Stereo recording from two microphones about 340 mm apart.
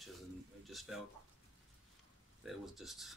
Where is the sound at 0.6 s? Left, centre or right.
Centre.